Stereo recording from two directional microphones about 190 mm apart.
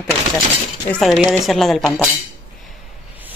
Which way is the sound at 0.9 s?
Centre (ahead or behind).